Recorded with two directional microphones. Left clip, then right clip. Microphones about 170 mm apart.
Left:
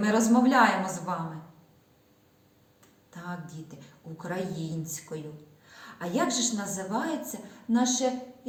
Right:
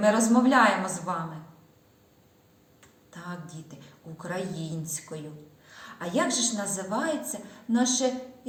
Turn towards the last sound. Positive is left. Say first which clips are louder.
# right 1 dB
turn(degrees=10)  # may be behind; listen again after turning